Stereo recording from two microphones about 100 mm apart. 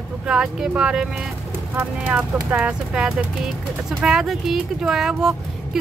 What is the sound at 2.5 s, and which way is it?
Speech, 10° right (ahead or behind).